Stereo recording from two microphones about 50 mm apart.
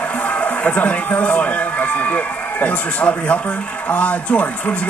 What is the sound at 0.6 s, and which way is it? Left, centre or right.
Speech, left.